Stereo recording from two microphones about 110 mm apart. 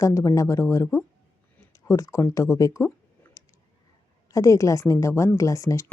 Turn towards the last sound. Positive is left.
turn(degrees=25)  # may be behind; listen again after turning